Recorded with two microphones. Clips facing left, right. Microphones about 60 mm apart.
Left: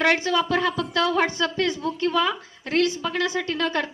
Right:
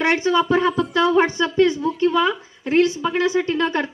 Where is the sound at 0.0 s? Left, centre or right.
Right.